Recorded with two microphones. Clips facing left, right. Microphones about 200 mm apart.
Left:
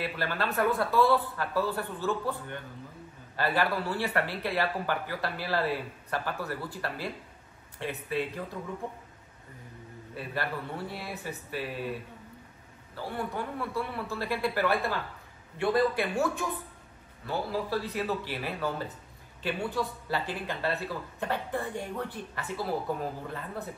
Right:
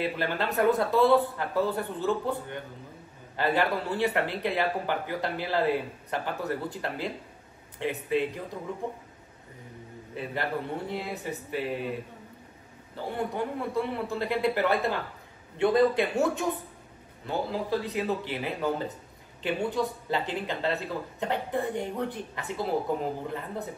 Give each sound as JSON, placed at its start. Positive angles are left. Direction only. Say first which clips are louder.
{"t": 0.0, "sound": "speech", "louder": "right 3 dB", "side_deg": -20}
{"t": 10.1, "sound": "speech", "louder": "right 3 dB", "side_deg": -20}
{"t": 13.0, "sound": "speech", "louder": "right 3 dB", "side_deg": -20}